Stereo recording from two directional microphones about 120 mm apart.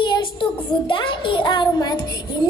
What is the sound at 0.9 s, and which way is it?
Music, 45° left (ahead or behind).